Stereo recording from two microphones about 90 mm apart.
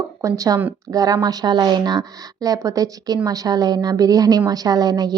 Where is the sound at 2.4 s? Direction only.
40° right (ahead or behind).